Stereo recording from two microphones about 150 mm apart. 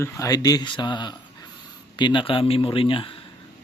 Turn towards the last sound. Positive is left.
turn(degrees=35)  # may be behind; listen again after turning